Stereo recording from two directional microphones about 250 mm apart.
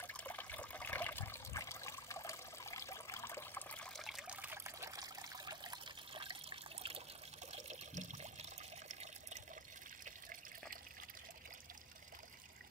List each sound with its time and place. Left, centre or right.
0.0 s water: centre; by 9.4 s right